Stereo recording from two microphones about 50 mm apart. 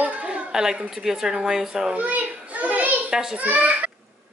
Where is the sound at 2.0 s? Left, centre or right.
Right.